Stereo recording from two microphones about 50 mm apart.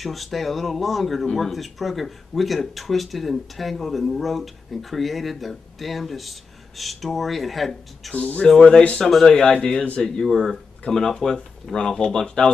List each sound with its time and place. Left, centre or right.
0.0 s speech: centre
8.1 s speech: left
9.0 s speech: centre
9.3 s speech: centre